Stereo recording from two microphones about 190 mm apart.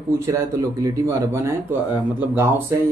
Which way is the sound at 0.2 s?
15° right (ahead or behind).